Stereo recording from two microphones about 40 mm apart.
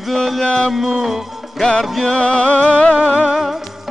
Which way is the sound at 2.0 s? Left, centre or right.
Left.